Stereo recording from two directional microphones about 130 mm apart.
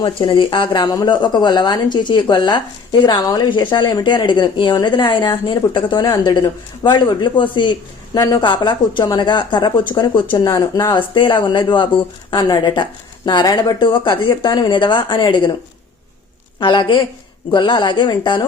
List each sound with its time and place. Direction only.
0.0 s a woman's voice: 40° left (ahead or behind)
10.3 s speech: 25° left (ahead or behind)
10.9 s a woman's voice: 40° left (ahead or behind)
16.6 s a woman's voice: 40° left (ahead or behind)